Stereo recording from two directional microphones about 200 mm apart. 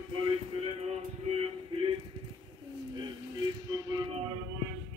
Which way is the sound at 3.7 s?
20° right (ahead or behind).